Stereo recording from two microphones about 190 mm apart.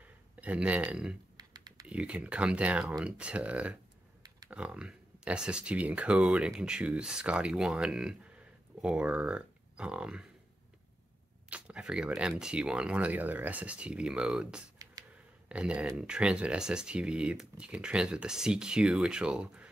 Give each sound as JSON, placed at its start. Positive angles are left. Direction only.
{"t": 0.4, "sound": "speech", "side_deg": -5}
{"t": 1.3, "sound": "typing", "side_deg": -20}
{"t": 1.9, "sound": "speech", "side_deg": -5}
{"t": 11.5, "sound": "speech", "side_deg": -5}
{"t": 14.8, "sound": "a sound", "side_deg": -20}
{"t": 15.4, "sound": "speech", "side_deg": -5}